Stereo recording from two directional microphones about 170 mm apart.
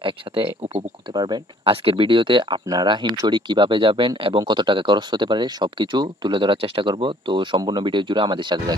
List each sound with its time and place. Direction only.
1.1 s speech: 25° right (ahead or behind)